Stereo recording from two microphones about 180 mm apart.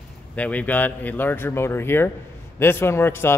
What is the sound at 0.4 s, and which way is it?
A man's voice, 10° left (ahead or behind).